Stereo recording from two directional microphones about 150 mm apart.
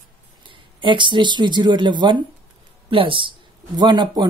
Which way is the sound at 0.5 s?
30° right (ahead or behind).